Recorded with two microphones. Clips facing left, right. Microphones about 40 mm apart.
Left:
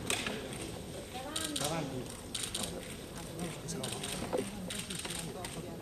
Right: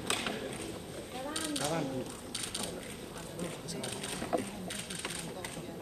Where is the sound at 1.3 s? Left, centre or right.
Left.